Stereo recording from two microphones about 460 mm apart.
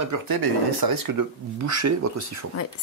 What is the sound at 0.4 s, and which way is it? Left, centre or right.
Speech, right.